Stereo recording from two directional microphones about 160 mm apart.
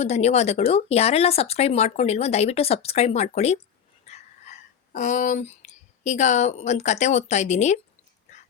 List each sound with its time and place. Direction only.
0.0 s speech: 40° left (ahead or behind)